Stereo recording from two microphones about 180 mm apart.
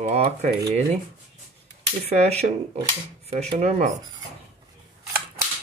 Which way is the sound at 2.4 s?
35° right (ahead or behind).